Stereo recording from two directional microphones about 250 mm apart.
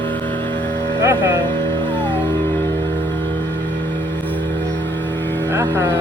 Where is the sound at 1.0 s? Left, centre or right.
Centre.